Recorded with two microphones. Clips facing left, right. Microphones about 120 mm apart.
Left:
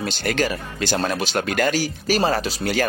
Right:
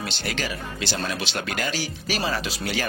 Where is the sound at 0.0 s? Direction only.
50° left (ahead or behind).